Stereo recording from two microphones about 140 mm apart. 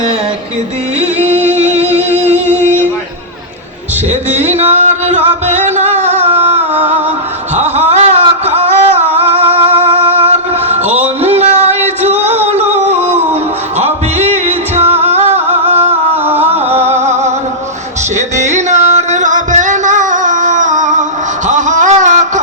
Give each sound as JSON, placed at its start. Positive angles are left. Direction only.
{"t": 1.3, "sound": "music", "side_deg": -50}
{"t": 4.3, "sound": "music", "side_deg": -55}
{"t": 7.5, "sound": "a sound", "side_deg": -50}
{"t": 12.5, "sound": "music", "side_deg": -50}
{"t": 16.2, "sound": "music", "side_deg": -15}
{"t": 16.6, "sound": "music", "side_deg": -50}
{"t": 18.3, "sound": "music", "side_deg": -55}
{"t": 21.4, "sound": "a sound", "side_deg": -60}